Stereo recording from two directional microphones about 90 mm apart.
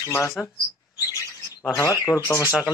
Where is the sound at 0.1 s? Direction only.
30° left (ahead or behind).